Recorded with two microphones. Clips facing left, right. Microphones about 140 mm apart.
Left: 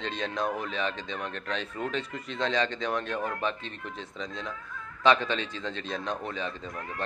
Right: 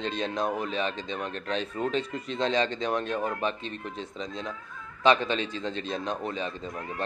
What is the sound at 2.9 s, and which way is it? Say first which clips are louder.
Speech: right 2 dB; 20° right (ahead or behind).